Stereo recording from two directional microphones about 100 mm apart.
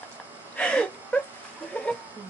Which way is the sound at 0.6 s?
10° left (ahead or behind).